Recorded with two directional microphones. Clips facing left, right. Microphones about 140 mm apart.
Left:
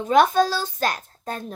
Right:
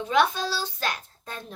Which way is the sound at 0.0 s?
45° left (ahead or behind).